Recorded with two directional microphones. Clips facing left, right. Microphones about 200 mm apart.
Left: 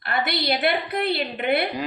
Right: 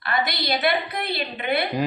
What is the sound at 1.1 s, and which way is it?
Speech, 55° left (ahead or behind).